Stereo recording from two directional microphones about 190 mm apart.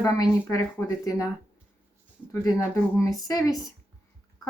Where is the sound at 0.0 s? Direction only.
20° left (ahead or behind).